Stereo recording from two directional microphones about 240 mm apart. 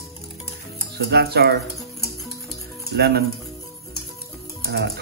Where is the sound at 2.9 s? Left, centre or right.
Right.